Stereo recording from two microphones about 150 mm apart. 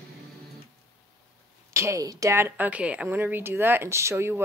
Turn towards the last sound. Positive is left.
turn(degrees=-15)  # may be behind; listen again after turning